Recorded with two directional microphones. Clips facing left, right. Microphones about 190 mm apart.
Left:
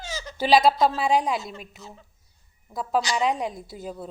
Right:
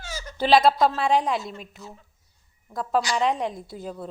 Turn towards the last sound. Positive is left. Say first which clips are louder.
# right 1 dB
turn(degrees=5)  # may be behind; listen again after turning